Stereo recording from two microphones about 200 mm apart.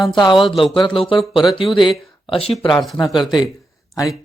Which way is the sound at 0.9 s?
25° left (ahead or behind).